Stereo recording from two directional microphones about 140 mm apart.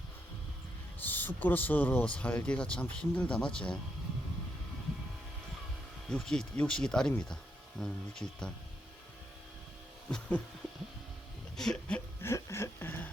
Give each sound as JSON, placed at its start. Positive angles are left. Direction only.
{"t": 1.0, "sound": "speech", "side_deg": 15}
{"t": 6.1, "sound": "speech", "side_deg": 5}
{"t": 10.1, "sound": "speech", "side_deg": 10}
{"t": 11.5, "sound": "speech", "side_deg": 5}
{"t": 12.2, "sound": "a sound", "side_deg": 20}